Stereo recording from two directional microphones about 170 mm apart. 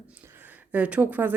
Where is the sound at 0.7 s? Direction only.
10° right (ahead or behind).